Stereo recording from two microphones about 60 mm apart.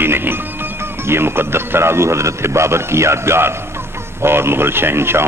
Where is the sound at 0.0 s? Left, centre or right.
Right.